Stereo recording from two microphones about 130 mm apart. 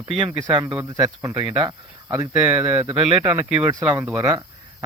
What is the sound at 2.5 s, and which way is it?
Speech, 15° right (ahead or behind).